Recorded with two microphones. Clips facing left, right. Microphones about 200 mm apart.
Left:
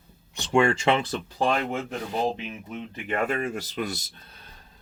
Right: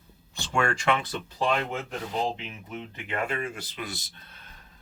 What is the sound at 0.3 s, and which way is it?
Speech, 25° left (ahead or behind).